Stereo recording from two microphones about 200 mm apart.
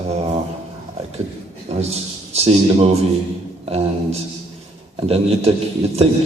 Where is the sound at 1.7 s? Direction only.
35° right (ahead or behind).